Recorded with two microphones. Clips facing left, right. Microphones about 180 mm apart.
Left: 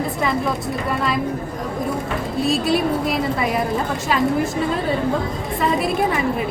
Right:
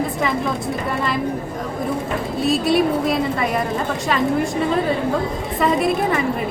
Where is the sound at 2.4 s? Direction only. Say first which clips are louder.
Right 2 dB; centre (ahead or behind).